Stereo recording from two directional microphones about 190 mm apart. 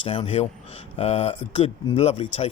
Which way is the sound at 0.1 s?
30° left (ahead or behind).